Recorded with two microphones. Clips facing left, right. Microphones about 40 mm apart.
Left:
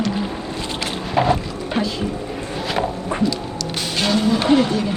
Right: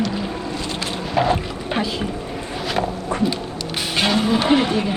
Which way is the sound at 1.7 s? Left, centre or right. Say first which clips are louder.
Left 1 dB; centre.